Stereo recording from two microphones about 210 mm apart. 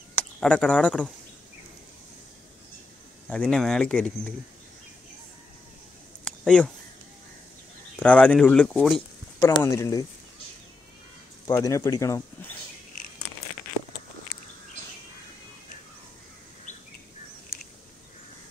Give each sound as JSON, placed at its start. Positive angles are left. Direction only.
{"t": 0.1, "sound": "speech", "side_deg": 5}
{"t": 3.3, "sound": "speech", "side_deg": 5}
{"t": 6.2, "sound": "a sound", "side_deg": 5}
{"t": 8.0, "sound": "speech", "side_deg": 5}
{"t": 9.4, "sound": "speech", "side_deg": 15}
{"t": 11.4, "sound": "speech", "side_deg": 15}